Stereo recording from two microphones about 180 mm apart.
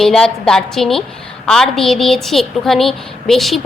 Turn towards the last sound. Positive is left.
turn(degrees=0)  # may be behind; listen again after turning